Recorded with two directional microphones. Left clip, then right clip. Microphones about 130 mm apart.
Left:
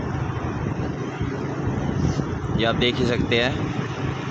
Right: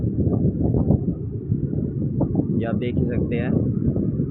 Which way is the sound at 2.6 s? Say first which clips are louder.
Left 5 dB; 20° left (ahead or behind).